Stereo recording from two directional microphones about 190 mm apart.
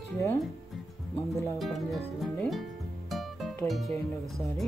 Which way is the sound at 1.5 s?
Centre (ahead or behind).